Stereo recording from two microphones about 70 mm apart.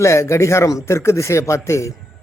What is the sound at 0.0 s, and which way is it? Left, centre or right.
A man's voice, left.